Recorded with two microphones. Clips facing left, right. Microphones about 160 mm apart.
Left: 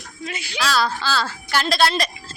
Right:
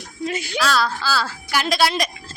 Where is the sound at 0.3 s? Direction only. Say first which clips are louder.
Right 6 dB; 45° right (ahead or behind).